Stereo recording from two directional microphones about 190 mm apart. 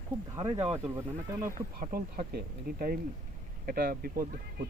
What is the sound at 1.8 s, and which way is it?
Speech, 50° right (ahead or behind).